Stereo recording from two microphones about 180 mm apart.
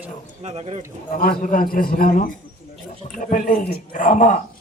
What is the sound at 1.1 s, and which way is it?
Speech, 55° left (ahead or behind).